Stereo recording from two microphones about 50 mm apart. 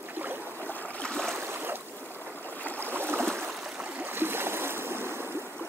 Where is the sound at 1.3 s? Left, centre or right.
Right.